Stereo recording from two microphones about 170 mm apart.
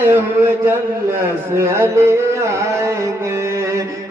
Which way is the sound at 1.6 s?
15° right (ahead or behind).